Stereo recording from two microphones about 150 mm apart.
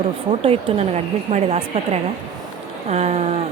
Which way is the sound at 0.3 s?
40° right (ahead or behind).